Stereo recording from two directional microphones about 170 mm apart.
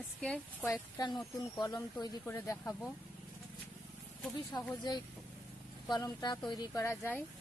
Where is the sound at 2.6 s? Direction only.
5° left (ahead or behind).